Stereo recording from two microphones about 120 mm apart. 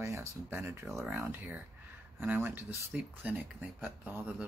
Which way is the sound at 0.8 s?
Centre (ahead or behind).